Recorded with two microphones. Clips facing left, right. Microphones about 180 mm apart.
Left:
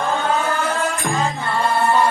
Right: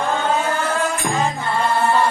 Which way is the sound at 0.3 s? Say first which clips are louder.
Even; 15° right (ahead or behind).